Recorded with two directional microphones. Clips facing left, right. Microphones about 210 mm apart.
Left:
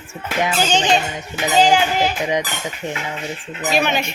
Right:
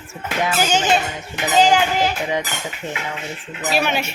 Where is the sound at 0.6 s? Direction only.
5° right (ahead or behind).